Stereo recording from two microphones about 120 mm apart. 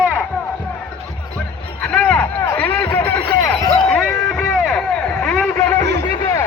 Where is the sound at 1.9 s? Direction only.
10° left (ahead or behind).